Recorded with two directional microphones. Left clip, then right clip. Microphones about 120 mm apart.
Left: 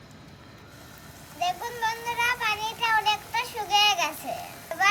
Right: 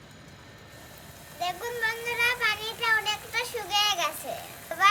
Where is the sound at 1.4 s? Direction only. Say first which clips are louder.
Left 2 dB; 30° right (ahead or behind).